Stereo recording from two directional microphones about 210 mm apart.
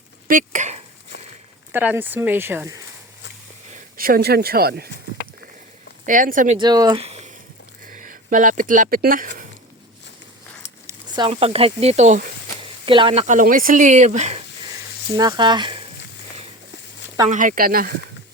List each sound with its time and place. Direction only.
0.3 s speech: 40° right (ahead or behind)
1.7 s speech: 10° right (ahead or behind)
3.9 s speech: 45° right (ahead or behind)
6.1 s speech: 40° right (ahead or behind)
6.6 s speech: 20° right (ahead or behind)
7.0 s a sound: 30° right (ahead or behind)
7.9 s speech: 40° right (ahead or behind)
10.8 s speech: 20° right (ahead or behind)
13.2 s speech: 40° right (ahead or behind)
15.1 s speech: 20° right (ahead or behind)
17.2 s speech: 40° right (ahead or behind)